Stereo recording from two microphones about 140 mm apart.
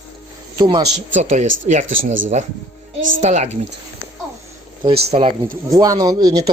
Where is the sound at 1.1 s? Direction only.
60° right (ahead or behind).